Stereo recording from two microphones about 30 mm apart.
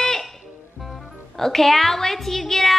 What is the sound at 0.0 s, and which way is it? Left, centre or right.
Music, centre.